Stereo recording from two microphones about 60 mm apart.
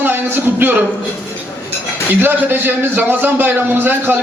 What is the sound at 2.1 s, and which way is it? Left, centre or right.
A man's voice, right.